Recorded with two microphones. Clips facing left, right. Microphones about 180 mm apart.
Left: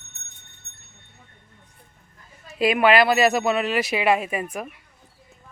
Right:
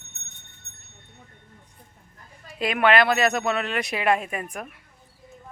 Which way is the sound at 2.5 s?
5° left (ahead or behind).